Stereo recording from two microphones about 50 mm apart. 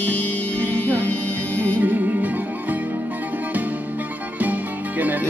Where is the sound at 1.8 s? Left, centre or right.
Right.